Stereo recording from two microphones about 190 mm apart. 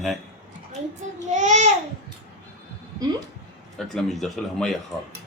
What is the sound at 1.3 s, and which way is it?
Speech, 40° right (ahead or behind).